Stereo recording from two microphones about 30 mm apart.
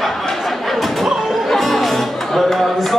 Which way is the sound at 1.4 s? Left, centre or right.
Centre.